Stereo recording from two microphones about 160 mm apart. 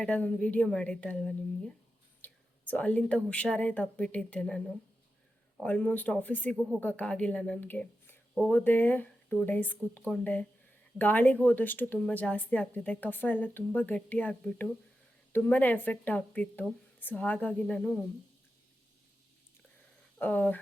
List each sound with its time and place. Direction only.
0.0 s speech: 5° left (ahead or behind)
20.1 s speech: 10° left (ahead or behind)